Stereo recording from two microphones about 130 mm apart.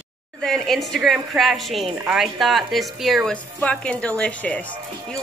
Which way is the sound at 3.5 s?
10° left (ahead or behind).